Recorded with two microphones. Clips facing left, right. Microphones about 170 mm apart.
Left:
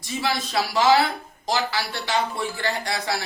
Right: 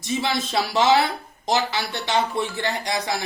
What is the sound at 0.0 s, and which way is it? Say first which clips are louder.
Speech: right 2 dB; 20° right (ahead or behind).